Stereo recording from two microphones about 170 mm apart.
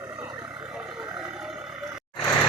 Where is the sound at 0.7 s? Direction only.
5° right (ahead or behind).